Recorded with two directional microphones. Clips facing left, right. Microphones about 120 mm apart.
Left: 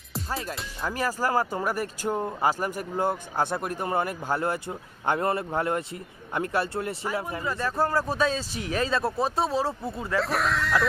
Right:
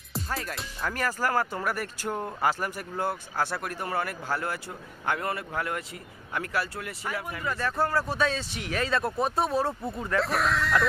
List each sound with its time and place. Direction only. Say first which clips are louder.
0.8 s speech: left 2 dB; 15° left (ahead or behind)
9.6 s speech: even; 5° left (ahead or behind)